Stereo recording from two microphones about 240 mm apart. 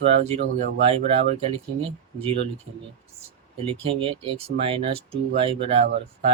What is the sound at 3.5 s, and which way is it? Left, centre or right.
Speech, right.